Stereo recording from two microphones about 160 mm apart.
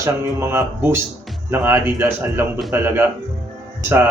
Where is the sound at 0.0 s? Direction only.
15° right (ahead or behind).